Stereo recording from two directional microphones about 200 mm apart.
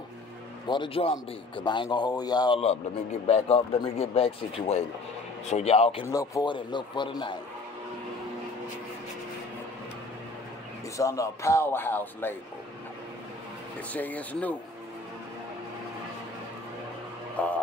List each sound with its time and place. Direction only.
0.7 s a man's voice: 25° left (ahead or behind)
6.0 s a man's voice: 15° left (ahead or behind)
11.0 s speech: 15° left (ahead or behind)
13.9 s speech: 10° left (ahead or behind)
17.4 s speech: 5° left (ahead or behind)